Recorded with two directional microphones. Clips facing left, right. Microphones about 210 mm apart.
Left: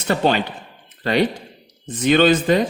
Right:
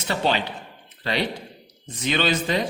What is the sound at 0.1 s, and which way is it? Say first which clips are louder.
Speech: left 5 dB; 50° left (ahead or behind).